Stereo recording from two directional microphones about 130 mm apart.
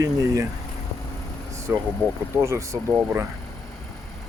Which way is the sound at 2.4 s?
20° right (ahead or behind).